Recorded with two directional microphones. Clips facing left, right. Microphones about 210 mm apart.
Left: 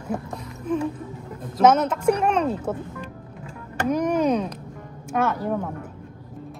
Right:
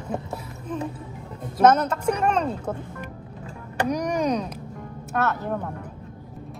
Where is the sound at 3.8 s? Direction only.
5° left (ahead or behind).